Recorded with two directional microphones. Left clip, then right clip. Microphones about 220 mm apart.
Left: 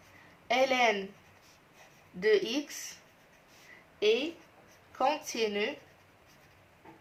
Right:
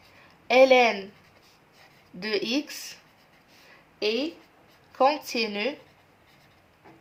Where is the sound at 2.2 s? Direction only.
45° right (ahead or behind).